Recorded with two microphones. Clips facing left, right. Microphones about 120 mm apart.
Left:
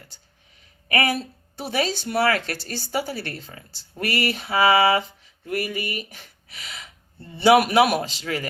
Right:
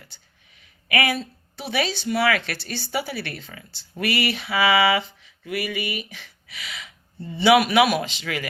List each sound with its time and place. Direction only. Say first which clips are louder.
0.9 s speech: even; 40° left (ahead or behind)